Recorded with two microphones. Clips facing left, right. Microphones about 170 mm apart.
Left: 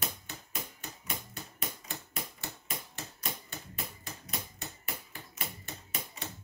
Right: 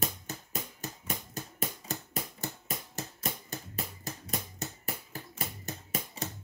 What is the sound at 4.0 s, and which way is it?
Music, 40° right (ahead or behind).